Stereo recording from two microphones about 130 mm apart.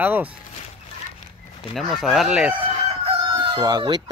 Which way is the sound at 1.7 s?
Centre (ahead or behind).